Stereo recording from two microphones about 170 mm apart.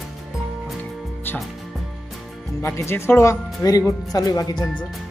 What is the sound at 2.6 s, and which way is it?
Speech, 15° left (ahead or behind).